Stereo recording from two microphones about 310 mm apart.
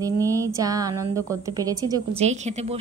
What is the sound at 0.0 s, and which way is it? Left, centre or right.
A woman's voice, centre.